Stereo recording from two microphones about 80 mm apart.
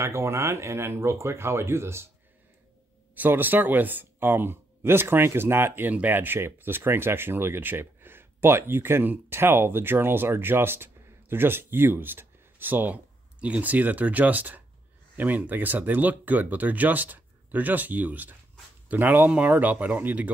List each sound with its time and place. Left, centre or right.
0.0 s speech: right
3.2 s speech: right